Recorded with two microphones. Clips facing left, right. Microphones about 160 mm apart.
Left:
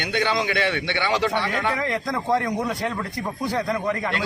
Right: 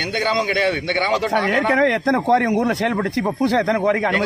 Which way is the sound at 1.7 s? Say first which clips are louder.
Right 9 dB; 70° right (ahead or behind).